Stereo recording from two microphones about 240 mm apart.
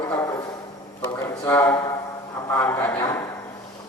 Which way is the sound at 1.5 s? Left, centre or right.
Centre.